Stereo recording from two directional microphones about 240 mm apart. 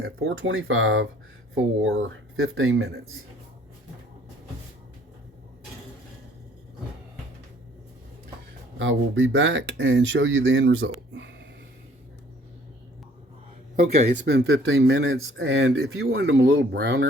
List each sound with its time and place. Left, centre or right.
0.0 s speech: right
8.8 s speech: right
13.7 s speech: right
14.3 s speech: right